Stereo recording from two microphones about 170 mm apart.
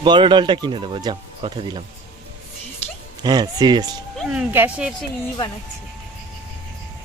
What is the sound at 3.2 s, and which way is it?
Speech, 25° right (ahead or behind).